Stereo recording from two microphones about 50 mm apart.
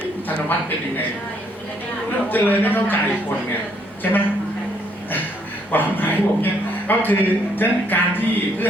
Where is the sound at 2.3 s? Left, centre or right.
Left.